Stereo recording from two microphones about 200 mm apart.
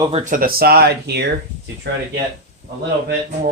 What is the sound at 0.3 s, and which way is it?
Speech, 45° right (ahead or behind).